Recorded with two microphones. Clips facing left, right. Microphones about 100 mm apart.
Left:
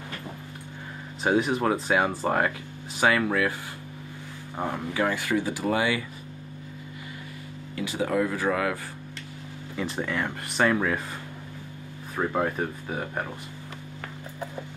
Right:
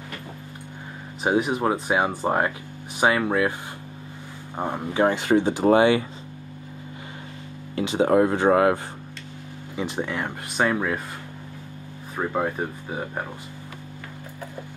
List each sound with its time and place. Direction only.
1.2 s speech: 15° right (ahead or behind)
4.6 s speech: 20° right (ahead or behind)
7.7 s speech: 25° right (ahead or behind)
9.8 s speech: 20° right (ahead or behind)
12.2 s speech: 10° right (ahead or behind)